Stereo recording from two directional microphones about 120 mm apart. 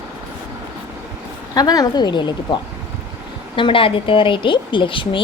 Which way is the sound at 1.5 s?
30° left (ahead or behind).